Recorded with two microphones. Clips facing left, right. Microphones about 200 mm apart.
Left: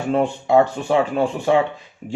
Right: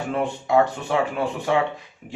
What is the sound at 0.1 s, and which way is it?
Speech, 30° left (ahead or behind).